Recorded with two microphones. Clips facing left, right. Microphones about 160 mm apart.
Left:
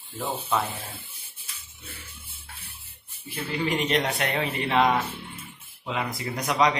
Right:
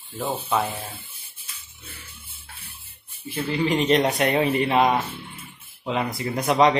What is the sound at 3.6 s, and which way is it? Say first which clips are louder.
Speech: right 5 dB; 20° right (ahead or behind).